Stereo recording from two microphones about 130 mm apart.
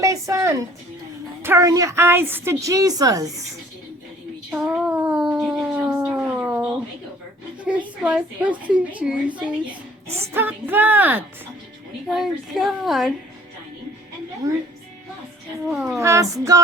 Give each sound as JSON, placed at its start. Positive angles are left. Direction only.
{"t": 0.0, "sound": "a sound", "side_deg": -25}
{"t": 1.4, "sound": "a woman's voice", "side_deg": -20}
{"t": 4.5, "sound": "a sound", "side_deg": -10}
{"t": 7.6, "sound": "a woman's voice", "side_deg": -10}
{"t": 10.3, "sound": "a woman's voice", "side_deg": -15}
{"t": 12.0, "sound": "a woman's voice", "side_deg": 0}
{"t": 14.4, "sound": "a woman's voice", "side_deg": -25}
{"t": 15.7, "sound": "a woman's voice", "side_deg": -5}
{"t": 16.0, "sound": "a woman's voice", "side_deg": -25}